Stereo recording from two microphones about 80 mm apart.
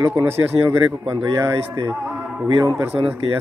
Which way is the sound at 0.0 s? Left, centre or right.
Right.